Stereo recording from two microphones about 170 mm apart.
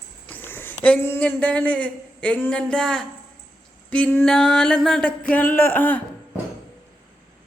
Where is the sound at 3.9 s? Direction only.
10° left (ahead or behind).